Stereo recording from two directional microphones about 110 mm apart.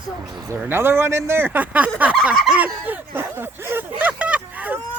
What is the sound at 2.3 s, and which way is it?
Fowl, centre (ahead or behind).